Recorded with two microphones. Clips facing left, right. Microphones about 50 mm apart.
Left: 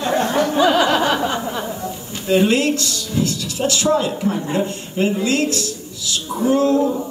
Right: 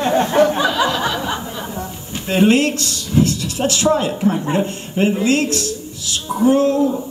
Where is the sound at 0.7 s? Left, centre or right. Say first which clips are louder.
Left 3 dB; left.